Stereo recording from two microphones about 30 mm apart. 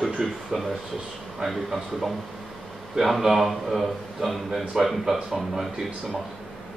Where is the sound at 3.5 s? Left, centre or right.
Centre.